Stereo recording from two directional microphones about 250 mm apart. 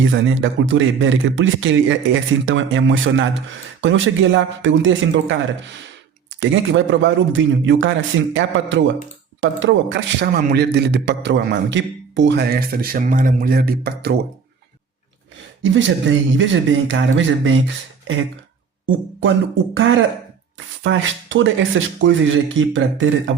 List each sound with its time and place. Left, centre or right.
0.0 s a man's voice: right
15.7 s speech: right
19.7 s speech: right